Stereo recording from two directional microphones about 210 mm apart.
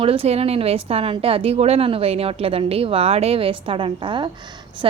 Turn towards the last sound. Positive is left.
turn(degrees=-20)  # may be behind; listen again after turning